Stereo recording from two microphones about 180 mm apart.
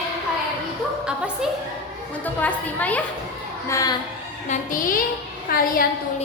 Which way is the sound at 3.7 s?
20° left (ahead or behind).